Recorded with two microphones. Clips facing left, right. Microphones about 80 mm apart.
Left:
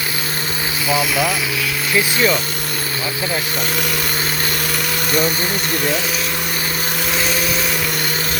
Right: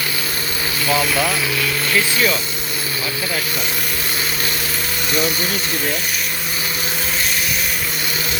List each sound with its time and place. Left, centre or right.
0.9 s speech: centre
1.9 s speech: centre